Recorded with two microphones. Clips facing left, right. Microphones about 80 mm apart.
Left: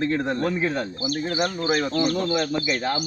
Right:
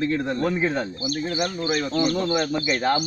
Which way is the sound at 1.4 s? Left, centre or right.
Left.